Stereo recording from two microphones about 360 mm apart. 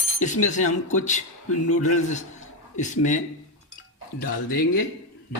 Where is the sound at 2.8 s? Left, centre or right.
Left.